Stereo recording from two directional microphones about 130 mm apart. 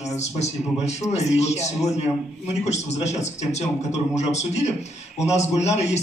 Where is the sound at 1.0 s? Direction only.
60° left (ahead or behind).